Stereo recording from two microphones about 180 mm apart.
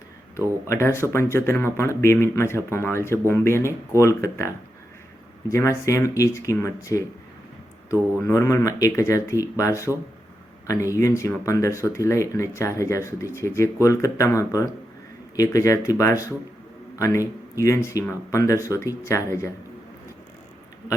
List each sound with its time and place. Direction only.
0.7 s speech: 15° left (ahead or behind)
8.2 s speech: 15° left (ahead or behind)
10.9 s a man's voice: 15° left (ahead or behind)